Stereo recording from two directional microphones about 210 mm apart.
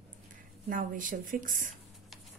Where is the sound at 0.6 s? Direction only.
40° right (ahead or behind).